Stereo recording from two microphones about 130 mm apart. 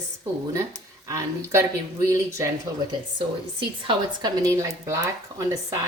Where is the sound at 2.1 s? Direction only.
25° right (ahead or behind).